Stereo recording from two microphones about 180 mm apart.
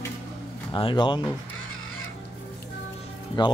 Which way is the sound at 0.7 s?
30° left (ahead or behind).